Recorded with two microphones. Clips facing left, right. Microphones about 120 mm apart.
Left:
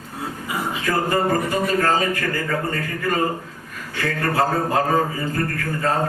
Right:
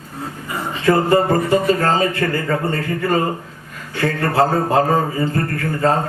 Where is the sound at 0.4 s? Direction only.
10° left (ahead or behind).